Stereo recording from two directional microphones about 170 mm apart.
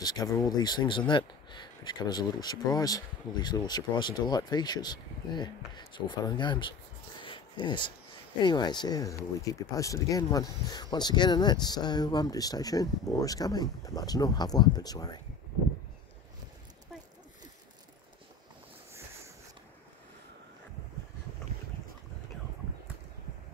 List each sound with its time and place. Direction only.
0.0 s speech: 20° left (ahead or behind)
7.2 s a sound: 30° left (ahead or behind)
8.4 s speech: 25° left (ahead or behind)